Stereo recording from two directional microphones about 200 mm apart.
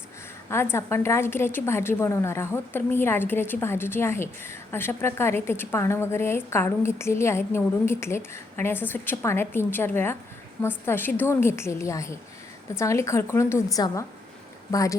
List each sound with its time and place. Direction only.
0.5 s a woman's voice: 10° left (ahead or behind)